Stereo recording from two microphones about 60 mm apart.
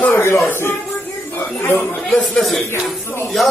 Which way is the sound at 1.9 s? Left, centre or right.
Centre.